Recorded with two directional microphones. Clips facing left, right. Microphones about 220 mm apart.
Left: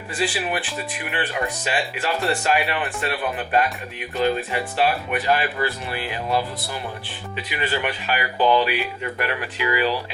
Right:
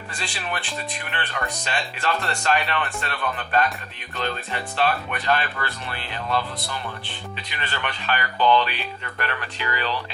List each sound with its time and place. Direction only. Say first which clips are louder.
0.2 s speech: left 8 dB; 5° left (ahead or behind)